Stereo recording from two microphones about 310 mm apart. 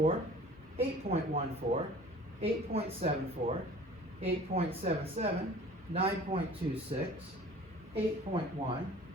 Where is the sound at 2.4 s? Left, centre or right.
Centre.